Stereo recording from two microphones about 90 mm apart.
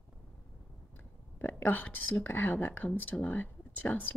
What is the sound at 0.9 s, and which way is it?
A woman's voice, 20° left (ahead or behind).